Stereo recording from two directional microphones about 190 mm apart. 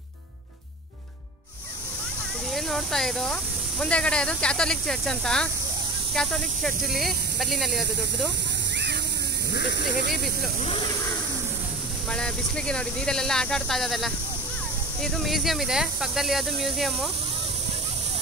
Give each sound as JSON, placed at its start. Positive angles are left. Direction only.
{"t": 2.5, "sound": "speech", "side_deg": 0}
{"t": 9.5, "sound": "speech", "side_deg": 60}
{"t": 10.6, "sound": "speech", "side_deg": 30}
{"t": 12.1, "sound": "speech", "side_deg": 5}